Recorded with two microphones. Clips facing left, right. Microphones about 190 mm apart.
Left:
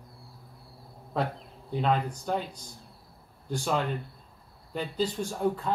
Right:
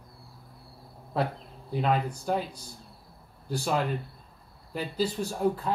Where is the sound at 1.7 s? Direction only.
5° right (ahead or behind).